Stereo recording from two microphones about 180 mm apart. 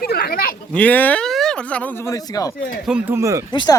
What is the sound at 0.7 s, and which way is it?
Speech, 10° left (ahead or behind).